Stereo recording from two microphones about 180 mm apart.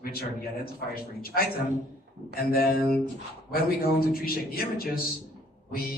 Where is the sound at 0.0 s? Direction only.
55° left (ahead or behind).